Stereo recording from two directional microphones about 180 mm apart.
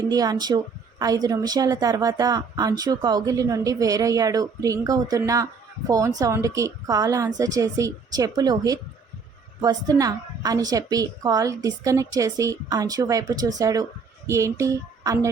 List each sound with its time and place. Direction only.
0.1 s a woman's voice: 20° right (ahead or behind)